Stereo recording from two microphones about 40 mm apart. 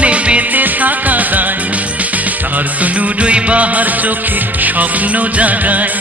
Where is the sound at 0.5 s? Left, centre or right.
Right.